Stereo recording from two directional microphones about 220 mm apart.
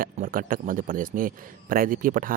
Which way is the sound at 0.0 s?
40° right (ahead or behind).